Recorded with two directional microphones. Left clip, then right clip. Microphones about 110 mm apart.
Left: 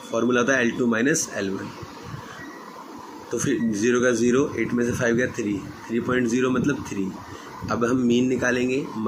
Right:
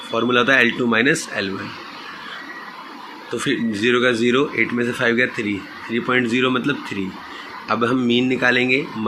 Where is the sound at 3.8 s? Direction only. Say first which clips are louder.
Right 4 dB; 20° right (ahead or behind).